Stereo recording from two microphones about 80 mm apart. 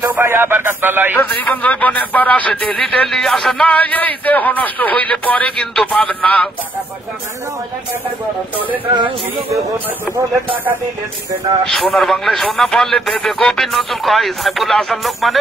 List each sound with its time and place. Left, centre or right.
0.0 s speech: right
1.1 s speech: left; by 3.7 s centre
3.7 s speech: centre
11.6 s speech: centre